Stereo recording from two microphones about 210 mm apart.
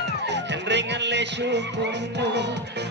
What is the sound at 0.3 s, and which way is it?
Music, 55° right (ahead or behind).